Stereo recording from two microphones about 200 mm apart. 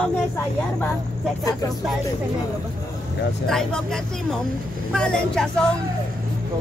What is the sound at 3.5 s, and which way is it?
Speech, 5° left (ahead or behind).